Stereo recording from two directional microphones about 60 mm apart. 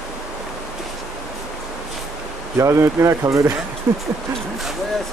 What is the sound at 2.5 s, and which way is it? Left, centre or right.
Speech, right.